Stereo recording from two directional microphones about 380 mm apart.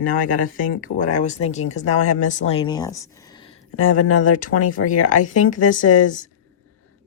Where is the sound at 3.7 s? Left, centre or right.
Left.